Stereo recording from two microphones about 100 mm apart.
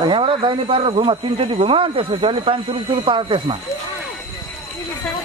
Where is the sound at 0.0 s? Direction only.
55° right (ahead or behind).